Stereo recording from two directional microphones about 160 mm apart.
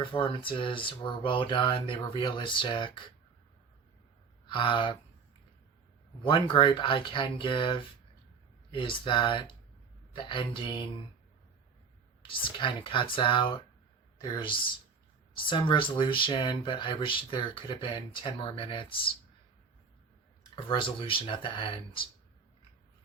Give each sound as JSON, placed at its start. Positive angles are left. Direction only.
{"t": 0.1, "sound": "speech", "side_deg": 30}
{"t": 4.4, "sound": "speech", "side_deg": 30}
{"t": 6.2, "sound": "speech", "side_deg": 30}
{"t": 12.3, "sound": "speech", "side_deg": 30}
{"t": 20.7, "sound": "speech", "side_deg": 30}